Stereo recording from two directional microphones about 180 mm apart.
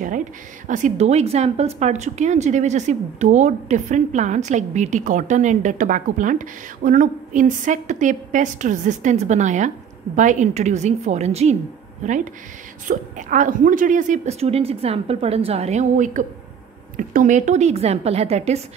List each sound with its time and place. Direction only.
0.7 s a woman's voice: 45° right (ahead or behind)